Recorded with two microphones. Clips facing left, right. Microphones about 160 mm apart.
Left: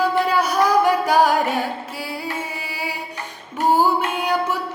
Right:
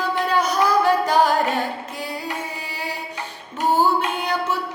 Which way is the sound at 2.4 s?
10° left (ahead or behind).